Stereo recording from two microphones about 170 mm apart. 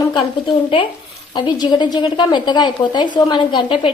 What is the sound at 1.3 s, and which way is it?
A woman's voice, 25° left (ahead or behind).